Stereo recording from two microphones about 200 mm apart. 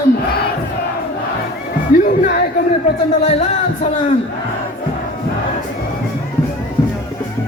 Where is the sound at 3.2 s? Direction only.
35° left (ahead or behind).